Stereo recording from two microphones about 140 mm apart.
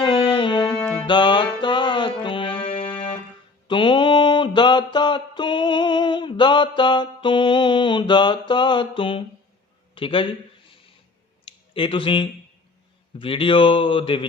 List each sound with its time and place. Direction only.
0.0 s music: 35° left (ahead or behind)
3.7 s a sound: 35° left (ahead or behind)
9.9 s a man's voice: 40° left (ahead or behind)
11.4 s speech: 40° left (ahead or behind)